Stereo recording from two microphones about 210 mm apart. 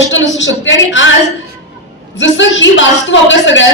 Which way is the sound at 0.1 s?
60° left (ahead or behind).